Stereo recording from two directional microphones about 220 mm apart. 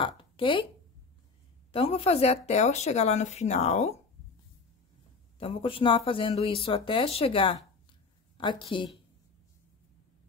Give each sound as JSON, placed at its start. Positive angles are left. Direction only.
{"t": 0.0, "sound": "a sound", "side_deg": 25}
{"t": 1.7, "sound": "speech", "side_deg": 25}
{"t": 5.4, "sound": "speech", "side_deg": 25}